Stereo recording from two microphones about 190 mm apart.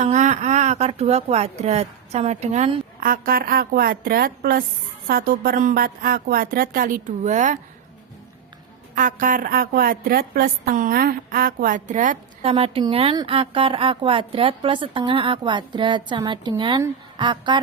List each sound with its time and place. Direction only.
0.0 s a woman's voice: 40° right (ahead or behind)
9.0 s a woman's voice: 45° right (ahead or behind); by 17.6 s 25° right (ahead or behind)